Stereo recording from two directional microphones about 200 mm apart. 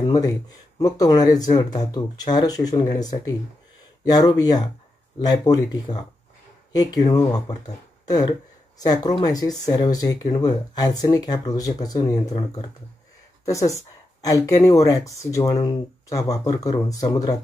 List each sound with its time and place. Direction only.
0.0 s speech: 20° left (ahead or behind)